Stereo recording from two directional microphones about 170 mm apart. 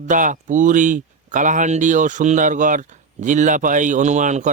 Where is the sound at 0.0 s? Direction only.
50° right (ahead or behind).